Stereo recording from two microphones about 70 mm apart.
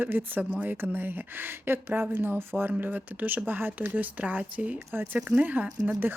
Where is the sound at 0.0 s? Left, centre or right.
Right.